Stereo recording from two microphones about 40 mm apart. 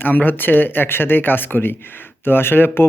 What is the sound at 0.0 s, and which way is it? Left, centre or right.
Speech, left.